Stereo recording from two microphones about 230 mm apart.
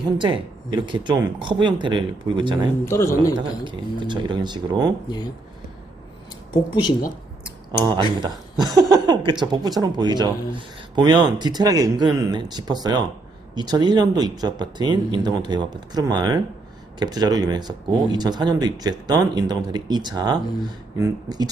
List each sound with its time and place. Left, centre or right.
0.0 s speech: centre
2.8 s speech: centre
3.4 s speech: right
5.0 s speech: centre
7.7 s speech: centre